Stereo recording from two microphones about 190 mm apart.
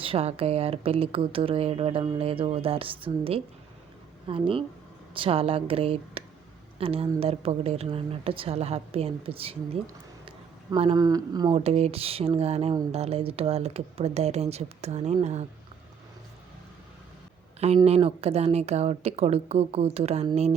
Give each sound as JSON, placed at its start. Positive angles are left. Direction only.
{"t": 0.0, "sound": "a woman's voice", "side_deg": -30}
{"t": 11.5, "sound": "a woman's voice", "side_deg": -35}
{"t": 17.8, "sound": "a woman's voice", "side_deg": -35}